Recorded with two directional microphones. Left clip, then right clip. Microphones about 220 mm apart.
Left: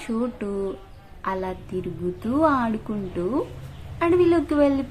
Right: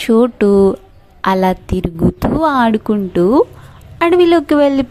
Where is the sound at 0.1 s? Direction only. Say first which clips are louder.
Right 17 dB; 40° right (ahead or behind).